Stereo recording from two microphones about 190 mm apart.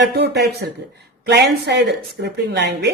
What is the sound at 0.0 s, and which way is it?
A woman's voice, 65° right (ahead or behind).